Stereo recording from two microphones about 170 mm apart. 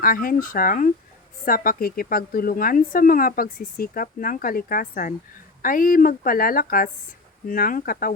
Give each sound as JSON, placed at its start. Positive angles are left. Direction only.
{"t": 0.0, "sound": "a woman's voice", "side_deg": 55}